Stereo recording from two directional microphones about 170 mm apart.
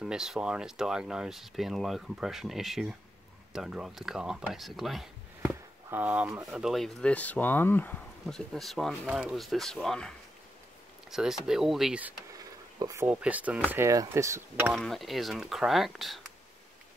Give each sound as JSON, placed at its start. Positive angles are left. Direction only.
{"t": 0.0, "sound": "speech", "side_deg": -5}
{"t": 6.6, "sound": "speech", "side_deg": 0}
{"t": 12.4, "sound": "speech", "side_deg": -20}
{"t": 14.7, "sound": "speech", "side_deg": 0}